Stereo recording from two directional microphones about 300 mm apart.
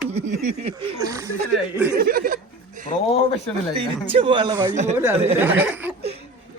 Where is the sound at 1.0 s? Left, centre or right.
Centre.